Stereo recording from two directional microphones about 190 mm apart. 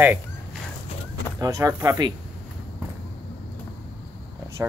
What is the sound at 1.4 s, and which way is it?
Speech, 20° right (ahead or behind).